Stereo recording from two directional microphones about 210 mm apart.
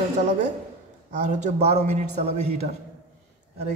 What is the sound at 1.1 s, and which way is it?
Speech, 35° right (ahead or behind).